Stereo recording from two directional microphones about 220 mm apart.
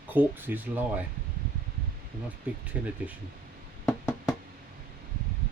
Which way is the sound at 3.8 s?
5° left (ahead or behind).